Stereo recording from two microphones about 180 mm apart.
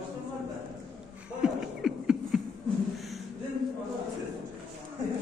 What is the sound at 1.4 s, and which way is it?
Beatboxing, 5° right (ahead or behind).